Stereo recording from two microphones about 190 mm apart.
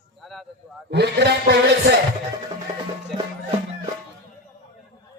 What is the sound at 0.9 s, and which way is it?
A man's voice, 60° right (ahead or behind).